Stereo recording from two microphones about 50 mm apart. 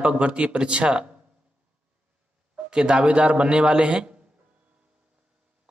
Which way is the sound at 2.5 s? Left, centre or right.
Centre.